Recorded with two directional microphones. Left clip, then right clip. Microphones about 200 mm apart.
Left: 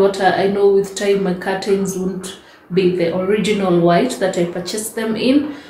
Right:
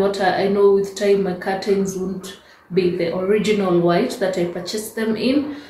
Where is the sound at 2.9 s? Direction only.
10° left (ahead or behind).